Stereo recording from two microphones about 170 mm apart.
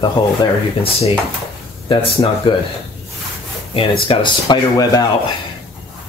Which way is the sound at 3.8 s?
30° left (ahead or behind).